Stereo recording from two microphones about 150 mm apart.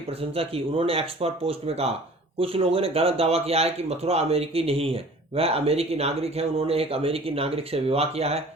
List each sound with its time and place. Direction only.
0.1 s speech: 40° right (ahead or behind)